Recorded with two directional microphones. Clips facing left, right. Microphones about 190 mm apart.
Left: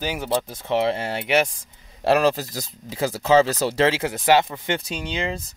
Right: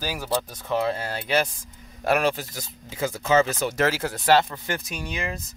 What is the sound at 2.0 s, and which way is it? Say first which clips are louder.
Speech: left 4 dB; 35° left (ahead or behind).